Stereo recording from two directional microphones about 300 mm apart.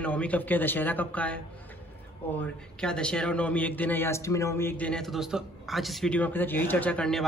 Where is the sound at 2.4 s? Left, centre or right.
Centre.